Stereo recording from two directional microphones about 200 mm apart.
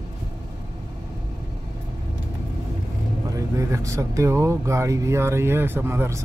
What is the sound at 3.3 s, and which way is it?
Speech, 15° right (ahead or behind).